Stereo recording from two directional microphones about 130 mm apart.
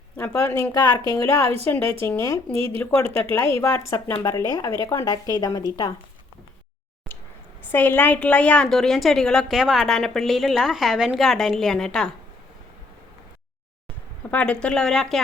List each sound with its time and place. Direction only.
0.2 s speech: 20° left (ahead or behind)
7.7 s a woman's voice: 15° left (ahead or behind)
14.3 s speech: 10° left (ahead or behind)